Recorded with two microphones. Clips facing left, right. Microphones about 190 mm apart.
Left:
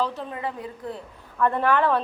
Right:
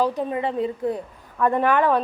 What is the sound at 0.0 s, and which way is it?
A woman's voice, 15° right (ahead or behind).